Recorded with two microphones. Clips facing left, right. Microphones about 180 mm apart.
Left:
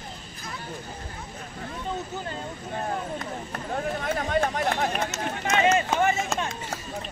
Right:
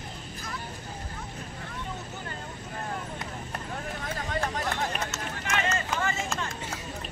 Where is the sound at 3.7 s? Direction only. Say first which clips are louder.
Left 9 dB; 55° left (ahead or behind).